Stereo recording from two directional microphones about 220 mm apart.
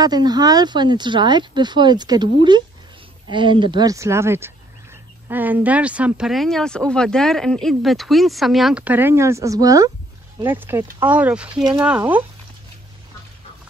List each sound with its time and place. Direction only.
0.0 s speech: 20° right (ahead or behind)
3.3 s speech: 20° right (ahead or behind); by 11.6 s 5° right (ahead or behind)